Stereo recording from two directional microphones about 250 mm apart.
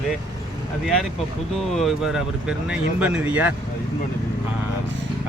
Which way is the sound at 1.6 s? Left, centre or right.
Centre.